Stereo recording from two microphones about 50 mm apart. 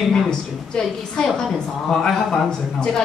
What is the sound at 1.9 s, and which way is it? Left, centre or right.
A man's voice, centre.